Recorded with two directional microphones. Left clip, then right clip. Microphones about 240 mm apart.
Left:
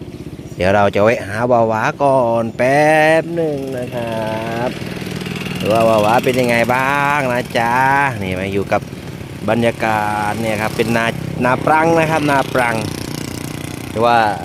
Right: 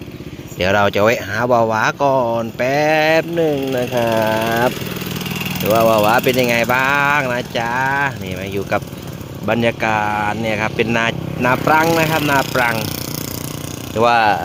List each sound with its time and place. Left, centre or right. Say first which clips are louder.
0.6 s speech: left 1 dB; centre
3.9 s speech: right 6 dB; centre
5.3 s vehicle: right 2 dB; right
5.6 s speech: even; centre
9.5 s speech: left 1 dB; centre
13.9 s speech: even; centre